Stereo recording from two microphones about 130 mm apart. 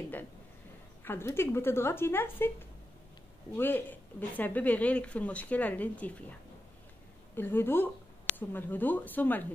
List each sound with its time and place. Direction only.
1.0 s speech: 20° left (ahead or behind)
3.5 s speech: 15° left (ahead or behind)
7.3 s speech: 15° left (ahead or behind)